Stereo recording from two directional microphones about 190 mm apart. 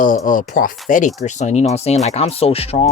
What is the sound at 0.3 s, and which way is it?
Speech, 45° left (ahead or behind).